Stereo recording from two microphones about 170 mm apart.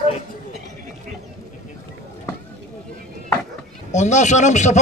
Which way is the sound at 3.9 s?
45° left (ahead or behind).